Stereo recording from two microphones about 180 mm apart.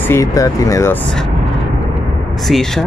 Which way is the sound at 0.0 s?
15° left (ahead or behind).